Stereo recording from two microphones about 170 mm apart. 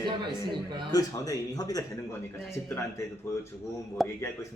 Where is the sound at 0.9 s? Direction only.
20° left (ahead or behind).